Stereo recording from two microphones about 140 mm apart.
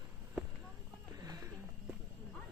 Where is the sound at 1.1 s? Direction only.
25° right (ahead or behind).